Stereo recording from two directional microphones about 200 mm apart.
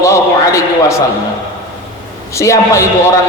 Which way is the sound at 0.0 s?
15° left (ahead or behind).